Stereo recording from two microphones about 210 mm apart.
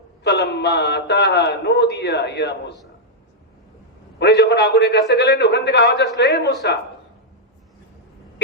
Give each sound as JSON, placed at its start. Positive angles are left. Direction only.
{"t": 0.3, "sound": "a man's voice", "side_deg": 50}
{"t": 4.2, "sound": "a man's voice", "side_deg": 55}